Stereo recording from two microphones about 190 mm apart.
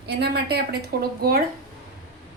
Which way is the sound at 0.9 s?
60° right (ahead or behind).